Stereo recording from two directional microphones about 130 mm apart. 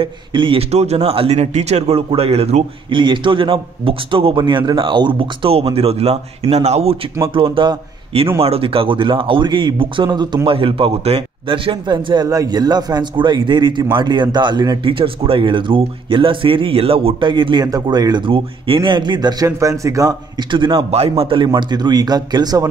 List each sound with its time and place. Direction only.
0.0 s speech: 40° right (ahead or behind)
3.0 s a man's voice: 40° right (ahead or behind)
7.3 s a man's voice: 40° right (ahead or behind); by 20.2 s 25° right (ahead or behind)
20.5 s speech: 40° right (ahead or behind)